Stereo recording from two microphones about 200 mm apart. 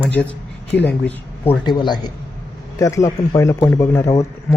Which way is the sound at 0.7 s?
10° left (ahead or behind).